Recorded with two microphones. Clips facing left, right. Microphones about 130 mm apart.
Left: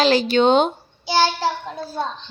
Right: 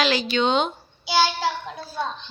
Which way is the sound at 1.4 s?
40° left (ahead or behind).